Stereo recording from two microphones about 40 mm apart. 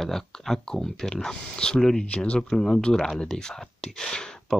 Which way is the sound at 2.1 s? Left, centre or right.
Left.